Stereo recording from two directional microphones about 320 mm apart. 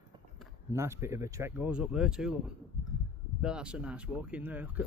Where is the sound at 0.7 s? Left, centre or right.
Centre.